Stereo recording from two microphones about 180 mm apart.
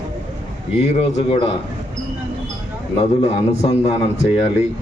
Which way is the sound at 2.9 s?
35° left (ahead or behind).